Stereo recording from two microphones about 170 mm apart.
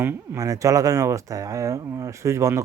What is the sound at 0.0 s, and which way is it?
Speech, 15° right (ahead or behind).